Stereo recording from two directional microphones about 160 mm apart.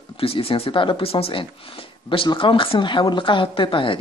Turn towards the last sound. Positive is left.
turn(degrees=30)  # may be behind; listen again after turning